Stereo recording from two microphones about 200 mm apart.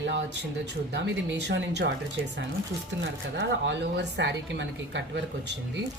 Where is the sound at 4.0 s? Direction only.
60° right (ahead or behind).